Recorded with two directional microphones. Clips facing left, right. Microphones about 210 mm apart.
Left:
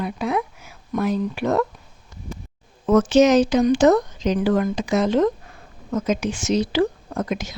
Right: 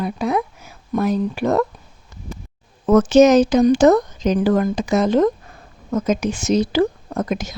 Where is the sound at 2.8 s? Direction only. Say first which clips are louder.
Right 3 dB; 45° right (ahead or behind).